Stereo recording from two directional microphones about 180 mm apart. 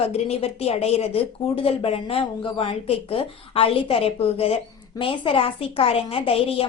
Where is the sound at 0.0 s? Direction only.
35° left (ahead or behind).